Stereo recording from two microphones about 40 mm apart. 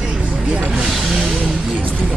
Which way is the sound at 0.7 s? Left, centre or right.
Centre.